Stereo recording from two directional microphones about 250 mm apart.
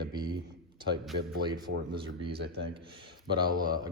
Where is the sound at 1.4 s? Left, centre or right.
Centre.